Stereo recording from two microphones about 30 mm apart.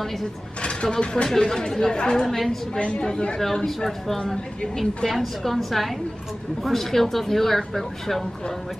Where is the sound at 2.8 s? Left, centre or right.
Left.